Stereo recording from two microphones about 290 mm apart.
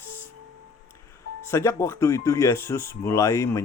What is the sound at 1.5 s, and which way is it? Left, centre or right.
Speech, centre.